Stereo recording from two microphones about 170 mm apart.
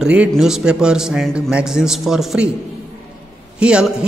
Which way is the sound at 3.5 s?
5° right (ahead or behind).